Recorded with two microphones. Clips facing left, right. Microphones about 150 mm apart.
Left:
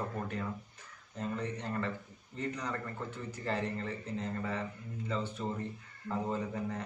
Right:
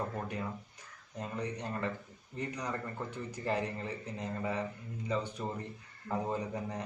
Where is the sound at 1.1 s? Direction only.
15° right (ahead or behind).